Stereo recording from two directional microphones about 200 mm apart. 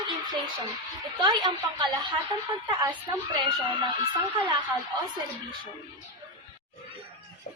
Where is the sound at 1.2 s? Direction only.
20° right (ahead or behind).